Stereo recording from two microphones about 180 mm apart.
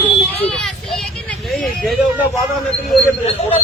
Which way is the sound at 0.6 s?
Centre (ahead or behind).